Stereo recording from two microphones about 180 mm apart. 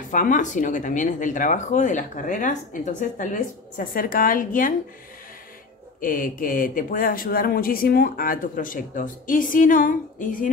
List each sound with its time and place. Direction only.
0.1 s speech: 45° left (ahead or behind)
5.9 s speech: 50° left (ahead or behind)